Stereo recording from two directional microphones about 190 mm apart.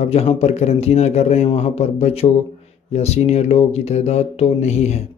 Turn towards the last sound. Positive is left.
turn(degrees=35)  # may be behind; listen again after turning